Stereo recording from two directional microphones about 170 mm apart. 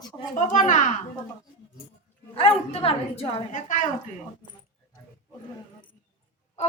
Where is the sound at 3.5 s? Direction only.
50° left (ahead or behind).